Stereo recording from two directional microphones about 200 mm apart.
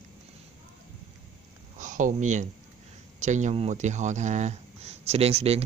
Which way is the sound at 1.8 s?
40° right (ahead or behind).